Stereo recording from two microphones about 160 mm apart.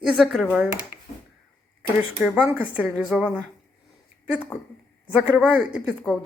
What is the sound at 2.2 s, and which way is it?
Speech, 10° right (ahead or behind).